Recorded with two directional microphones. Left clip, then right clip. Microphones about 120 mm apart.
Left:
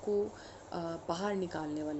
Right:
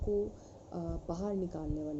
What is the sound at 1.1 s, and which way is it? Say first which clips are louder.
Speech: left 4 dB; centre (ahead or behind).